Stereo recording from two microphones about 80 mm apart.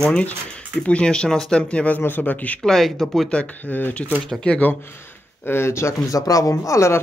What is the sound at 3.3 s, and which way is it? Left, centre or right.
Speech, centre.